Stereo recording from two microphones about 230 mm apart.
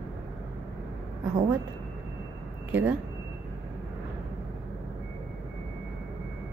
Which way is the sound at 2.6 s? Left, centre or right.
Centre.